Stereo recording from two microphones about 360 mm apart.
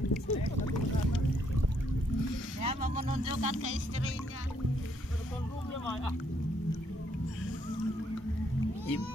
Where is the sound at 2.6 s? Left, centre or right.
Centre.